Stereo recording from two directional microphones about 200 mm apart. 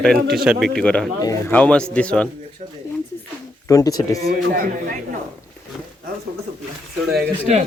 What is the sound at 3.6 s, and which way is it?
Speech, 15° left (ahead or behind).